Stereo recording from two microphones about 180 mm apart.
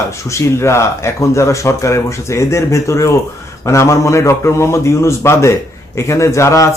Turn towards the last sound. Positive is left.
turn(degrees=15)  # may be behind; listen again after turning